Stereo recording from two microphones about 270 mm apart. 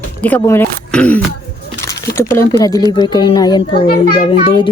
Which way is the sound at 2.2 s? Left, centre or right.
Centre.